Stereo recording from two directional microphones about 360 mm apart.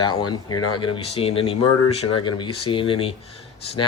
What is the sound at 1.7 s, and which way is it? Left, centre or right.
Speech, left.